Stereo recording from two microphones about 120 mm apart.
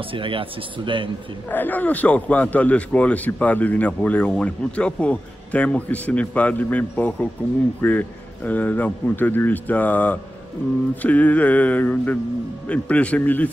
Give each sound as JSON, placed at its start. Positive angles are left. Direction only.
{"t": 0.1, "sound": "speech", "side_deg": -45}
{"t": 1.5, "sound": "a man's voice", "side_deg": 15}